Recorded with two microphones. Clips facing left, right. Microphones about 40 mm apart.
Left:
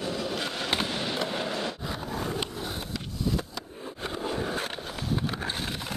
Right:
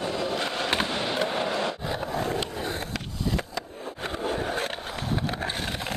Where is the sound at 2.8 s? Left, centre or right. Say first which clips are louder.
Right 1 dB; right.